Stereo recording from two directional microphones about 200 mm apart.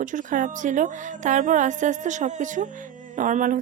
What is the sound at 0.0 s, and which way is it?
A woman's voice, 40° right (ahead or behind).